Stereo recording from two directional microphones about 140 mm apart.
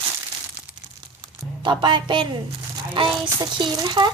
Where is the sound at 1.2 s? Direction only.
35° right (ahead or behind).